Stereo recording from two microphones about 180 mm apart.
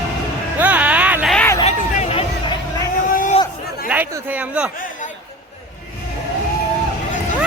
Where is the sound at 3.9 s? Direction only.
10° right (ahead or behind).